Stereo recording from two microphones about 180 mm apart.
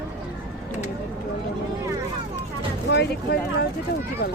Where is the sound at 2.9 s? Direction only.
65° left (ahead or behind).